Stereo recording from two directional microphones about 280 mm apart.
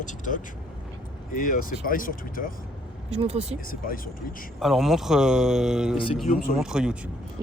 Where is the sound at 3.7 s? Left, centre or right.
Left.